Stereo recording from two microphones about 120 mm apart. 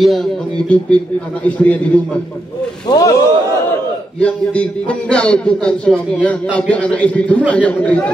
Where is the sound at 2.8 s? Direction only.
30° left (ahead or behind).